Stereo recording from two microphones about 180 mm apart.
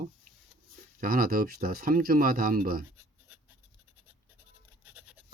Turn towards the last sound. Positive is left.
turn(degrees=-10)  # may be behind; listen again after turning